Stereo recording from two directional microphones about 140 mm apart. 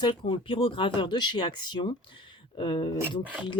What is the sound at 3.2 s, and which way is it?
Speech, 10° right (ahead or behind).